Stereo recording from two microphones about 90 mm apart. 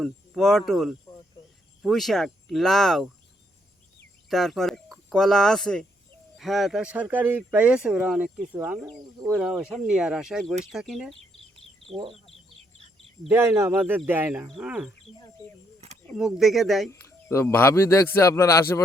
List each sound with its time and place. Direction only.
0.0 s speech: 5° left (ahead or behind)
4.3 s speech: 5° left (ahead or behind)
6.8 s speech: 15° right (ahead or behind)
9.4 s speech: 5° right (ahead or behind)
13.3 s speech: 30° right (ahead or behind)
14.6 s speech: 10° right (ahead or behind)
16.1 s speech: 5° right (ahead or behind)
16.9 s a man's voice: 30° left (ahead or behind)